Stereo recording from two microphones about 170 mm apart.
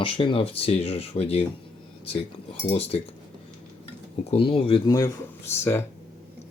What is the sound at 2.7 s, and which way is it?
Speech, 35° left (ahead or behind).